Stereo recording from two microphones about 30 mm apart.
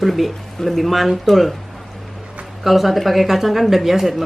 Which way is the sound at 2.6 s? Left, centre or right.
Centre.